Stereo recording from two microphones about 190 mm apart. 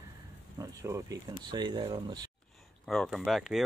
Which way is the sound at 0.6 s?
15° right (ahead or behind).